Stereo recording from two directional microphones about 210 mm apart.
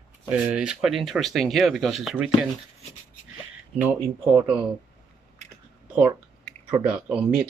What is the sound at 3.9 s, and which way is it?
Speech, 10° right (ahead or behind).